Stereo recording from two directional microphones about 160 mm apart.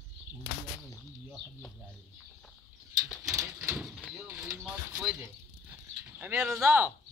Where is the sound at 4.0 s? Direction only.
Centre (ahead or behind).